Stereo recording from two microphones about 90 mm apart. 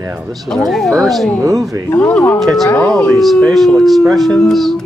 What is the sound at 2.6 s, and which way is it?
Speech, 20° left (ahead or behind).